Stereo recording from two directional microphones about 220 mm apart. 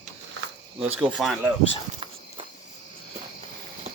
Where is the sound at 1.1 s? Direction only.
Centre (ahead or behind).